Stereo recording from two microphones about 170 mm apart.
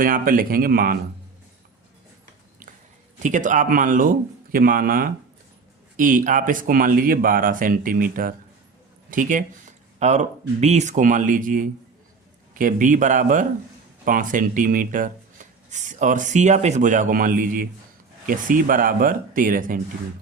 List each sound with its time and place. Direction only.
0.0 s speech: 55° right (ahead or behind)
3.2 s a man's voice: 50° right (ahead or behind)